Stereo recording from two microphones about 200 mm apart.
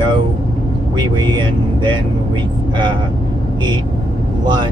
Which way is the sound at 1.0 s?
20° right (ahead or behind).